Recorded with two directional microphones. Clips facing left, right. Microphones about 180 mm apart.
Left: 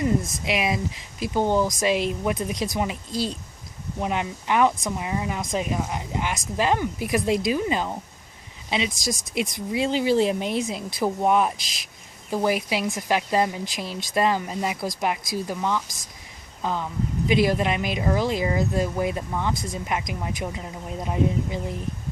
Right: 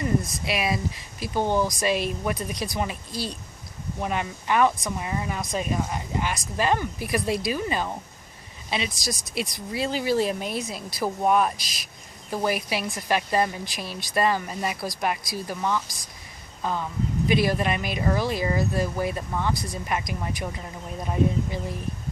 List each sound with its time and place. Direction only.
0.0 s speech: 20° left (ahead or behind)
17.2 s speech: 15° left (ahead or behind)